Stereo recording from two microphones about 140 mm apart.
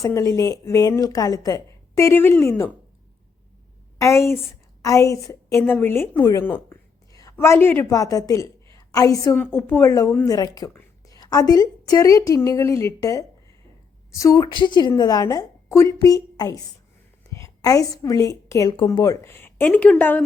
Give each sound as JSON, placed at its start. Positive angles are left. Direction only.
{"t": 0.0, "sound": "a woman's voice", "side_deg": 20}
{"t": 3.9, "sound": "a woman's voice", "side_deg": 20}
{"t": 7.1, "sound": "a woman's voice", "side_deg": 25}
{"t": 9.3, "sound": "a woman's voice", "side_deg": 10}